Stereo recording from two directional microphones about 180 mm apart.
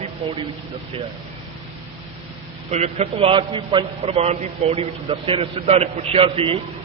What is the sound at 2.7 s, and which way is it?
A man's voice, 35° right (ahead or behind).